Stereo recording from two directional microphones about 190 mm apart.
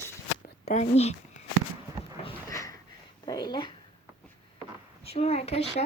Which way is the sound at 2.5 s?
15° left (ahead or behind).